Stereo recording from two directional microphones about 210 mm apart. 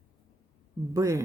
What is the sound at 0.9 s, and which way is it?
Speech, 15° right (ahead or behind).